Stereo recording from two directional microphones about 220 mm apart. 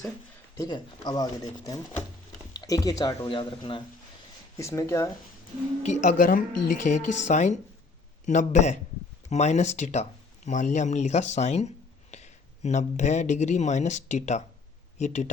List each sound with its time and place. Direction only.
0.5 s speech: 15° left (ahead or behind)
5.8 s speech: 35° left (ahead or behind)